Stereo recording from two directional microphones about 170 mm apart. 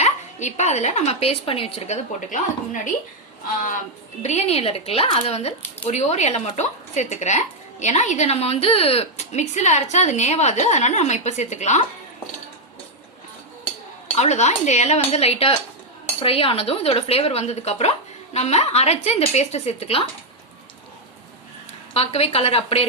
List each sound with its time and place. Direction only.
0.0 s a woman's voice: 45° left (ahead or behind)
14.2 s speech: 40° left (ahead or behind)
21.9 s speech: 35° left (ahead or behind)